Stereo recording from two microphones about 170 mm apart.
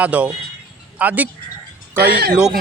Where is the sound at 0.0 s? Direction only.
5° right (ahead or behind).